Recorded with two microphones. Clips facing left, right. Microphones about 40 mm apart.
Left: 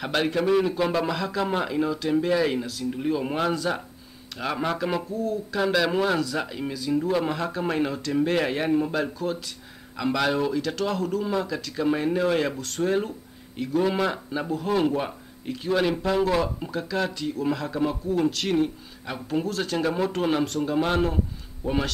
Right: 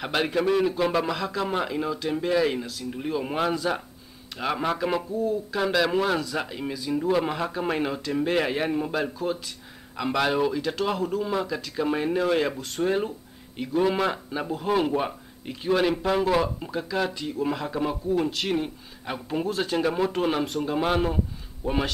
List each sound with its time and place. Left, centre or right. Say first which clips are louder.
0.0 s a man's voice: even; centre